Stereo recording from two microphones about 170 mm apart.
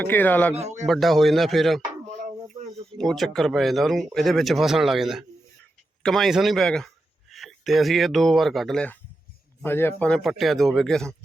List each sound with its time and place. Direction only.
0.0 s speech: 10° left (ahead or behind)
0.5 s speech: 40° right (ahead or behind)
0.9 s speech: centre (ahead or behind)
3.0 s a man's voice: centre (ahead or behind)